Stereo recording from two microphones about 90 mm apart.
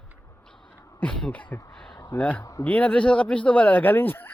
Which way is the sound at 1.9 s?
55° left (ahead or behind).